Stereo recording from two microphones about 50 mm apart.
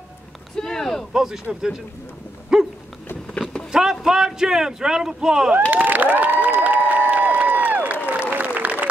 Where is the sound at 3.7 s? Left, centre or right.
Centre.